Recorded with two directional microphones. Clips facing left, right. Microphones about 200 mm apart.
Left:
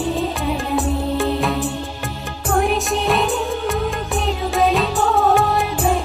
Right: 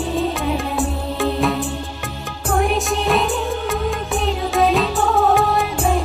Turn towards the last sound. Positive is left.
turn(degrees=0)  # may be behind; listen again after turning